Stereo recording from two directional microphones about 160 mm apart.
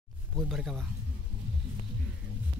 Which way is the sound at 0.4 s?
Centre (ahead or behind).